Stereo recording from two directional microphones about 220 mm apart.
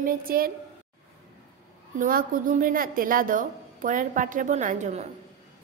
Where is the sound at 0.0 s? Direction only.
40° right (ahead or behind).